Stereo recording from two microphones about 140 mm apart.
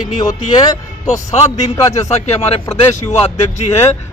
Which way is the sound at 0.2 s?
30° left (ahead or behind).